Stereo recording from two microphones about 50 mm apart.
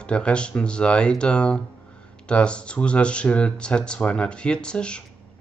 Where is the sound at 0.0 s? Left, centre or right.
Left.